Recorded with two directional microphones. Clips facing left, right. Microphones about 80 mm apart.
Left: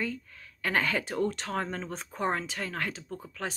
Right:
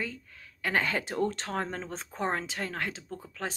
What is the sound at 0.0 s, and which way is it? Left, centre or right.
Speech, right.